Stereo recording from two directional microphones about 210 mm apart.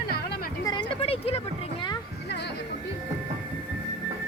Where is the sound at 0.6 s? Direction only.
25° left (ahead or behind).